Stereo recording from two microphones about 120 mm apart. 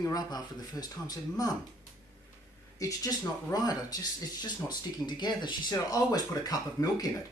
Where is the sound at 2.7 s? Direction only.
30° left (ahead or behind).